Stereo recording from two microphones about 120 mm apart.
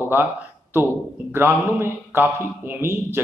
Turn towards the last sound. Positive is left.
turn(degrees=-20)  # may be behind; listen again after turning